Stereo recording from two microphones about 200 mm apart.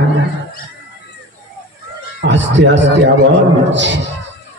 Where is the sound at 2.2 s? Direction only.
65° right (ahead or behind).